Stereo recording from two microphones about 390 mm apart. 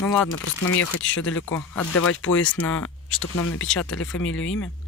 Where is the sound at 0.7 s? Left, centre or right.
Left.